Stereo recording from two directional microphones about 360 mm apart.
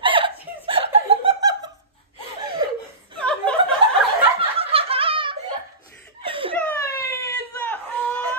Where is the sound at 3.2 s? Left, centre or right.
Centre.